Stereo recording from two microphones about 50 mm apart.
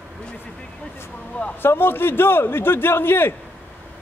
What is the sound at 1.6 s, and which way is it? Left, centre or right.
A man's voice, left.